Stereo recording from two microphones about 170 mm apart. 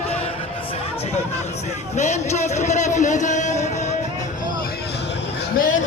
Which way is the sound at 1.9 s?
40° left (ahead or behind).